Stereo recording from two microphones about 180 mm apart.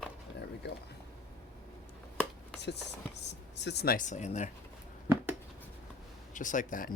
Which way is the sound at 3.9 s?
45° left (ahead or behind).